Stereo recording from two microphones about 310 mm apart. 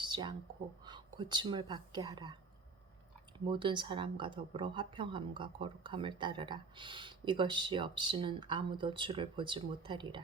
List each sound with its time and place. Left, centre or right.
0.0 s a sound: centre
0.9 s speech: centre
3.3 s speech: centre